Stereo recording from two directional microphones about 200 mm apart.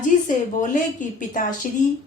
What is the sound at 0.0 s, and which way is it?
A woman's voice, 40° left (ahead or behind).